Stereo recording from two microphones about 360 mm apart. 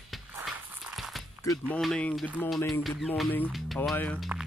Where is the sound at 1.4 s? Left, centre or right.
Centre.